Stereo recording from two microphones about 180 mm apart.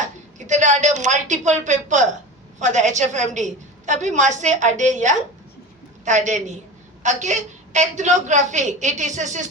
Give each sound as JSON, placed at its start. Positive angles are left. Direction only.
{"t": 0.3, "sound": "a woman's voice", "side_deg": -40}